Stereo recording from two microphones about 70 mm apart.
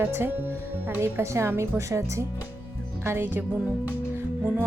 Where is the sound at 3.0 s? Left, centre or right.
Right.